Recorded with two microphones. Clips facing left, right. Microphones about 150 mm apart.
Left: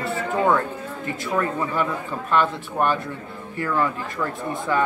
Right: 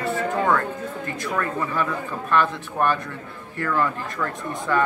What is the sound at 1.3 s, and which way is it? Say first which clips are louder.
Speech: left 2 dB; 15° left (ahead or behind).